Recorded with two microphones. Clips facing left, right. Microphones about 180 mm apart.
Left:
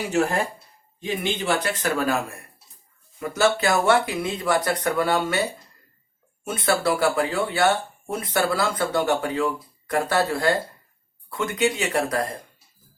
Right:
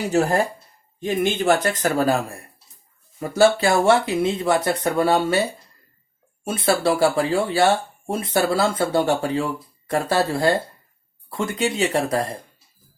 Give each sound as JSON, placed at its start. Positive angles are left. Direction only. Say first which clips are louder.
{"t": 0.1, "sound": "speech", "louder": "right 3 dB", "side_deg": -40}
{"t": 0.9, "sound": "speech", "louder": "right 5 dB", "side_deg": -50}
{"t": 3.2, "sound": "speech", "louder": "right 5 dB", "side_deg": -30}
{"t": 6.4, "sound": "speech", "louder": "right 3 dB", "side_deg": -30}